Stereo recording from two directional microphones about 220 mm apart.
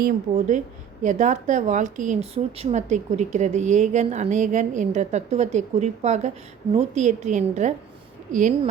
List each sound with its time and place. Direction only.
0.0 s a woman's voice: 35° right (ahead or behind)